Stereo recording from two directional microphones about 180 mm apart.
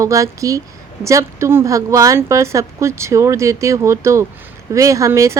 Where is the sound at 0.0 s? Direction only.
15° right (ahead or behind).